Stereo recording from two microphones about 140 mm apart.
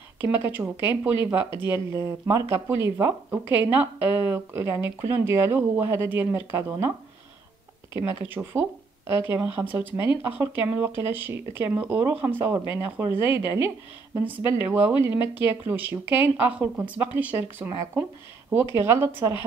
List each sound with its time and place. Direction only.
0.2 s speech: 15° right (ahead or behind)
8.3 s speech: 15° right (ahead or behind)
13.1 s a woman's voice: 40° left (ahead or behind)
14.1 s speech: 15° right (ahead or behind)
15.0 s a woman's voice: 40° left (ahead or behind)
15.6 s speech: 15° right (ahead or behind)